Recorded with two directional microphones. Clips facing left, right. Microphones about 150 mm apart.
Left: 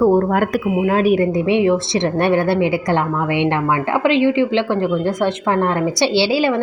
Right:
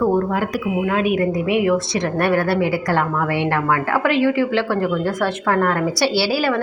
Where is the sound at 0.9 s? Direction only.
35° left (ahead or behind).